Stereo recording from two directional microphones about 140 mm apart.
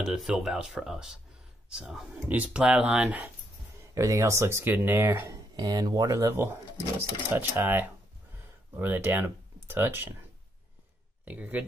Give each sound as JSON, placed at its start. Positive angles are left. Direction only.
{"t": 0.0, "sound": "speech", "side_deg": -5}
{"t": 3.9, "sound": "speech", "side_deg": -25}
{"t": 11.2, "sound": "speech", "side_deg": -10}